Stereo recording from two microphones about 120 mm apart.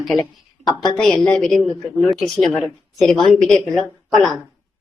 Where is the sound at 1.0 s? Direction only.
Centre (ahead or behind).